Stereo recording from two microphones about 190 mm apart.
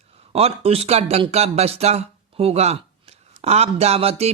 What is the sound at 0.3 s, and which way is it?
Speech, 30° right (ahead or behind).